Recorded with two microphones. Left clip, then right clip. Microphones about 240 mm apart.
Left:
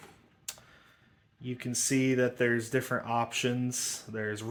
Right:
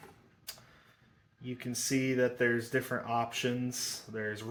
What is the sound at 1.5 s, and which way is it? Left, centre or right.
Speech, left.